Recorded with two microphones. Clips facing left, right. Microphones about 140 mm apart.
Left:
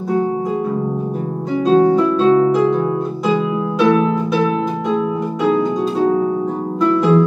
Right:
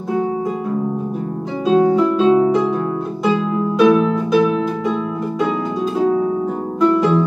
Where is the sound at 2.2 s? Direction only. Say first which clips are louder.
Left 1 dB; 15° right (ahead or behind).